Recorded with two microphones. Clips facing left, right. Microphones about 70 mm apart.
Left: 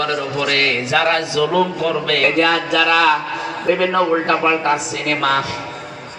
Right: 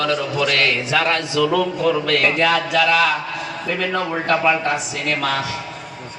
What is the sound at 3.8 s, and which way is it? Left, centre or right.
A man's voice, left.